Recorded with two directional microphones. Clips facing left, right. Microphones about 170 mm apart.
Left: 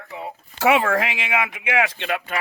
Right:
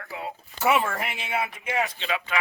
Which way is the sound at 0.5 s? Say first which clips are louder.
Left 5 dB; 90° left.